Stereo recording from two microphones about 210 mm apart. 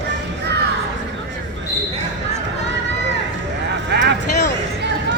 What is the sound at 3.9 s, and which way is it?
Vehicle, 55° right (ahead or behind).